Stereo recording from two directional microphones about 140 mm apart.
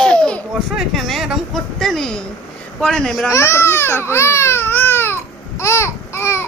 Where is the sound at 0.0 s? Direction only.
5° left (ahead or behind).